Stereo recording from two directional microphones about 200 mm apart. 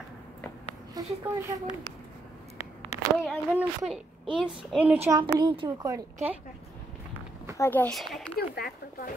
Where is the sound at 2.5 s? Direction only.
35° left (ahead or behind).